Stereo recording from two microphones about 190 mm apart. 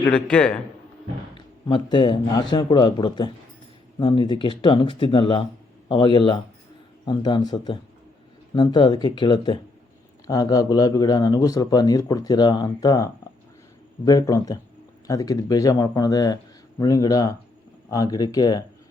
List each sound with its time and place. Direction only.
0.1 s a man's voice: 5° left (ahead or behind)
1.4 s speech: 25° left (ahead or behind)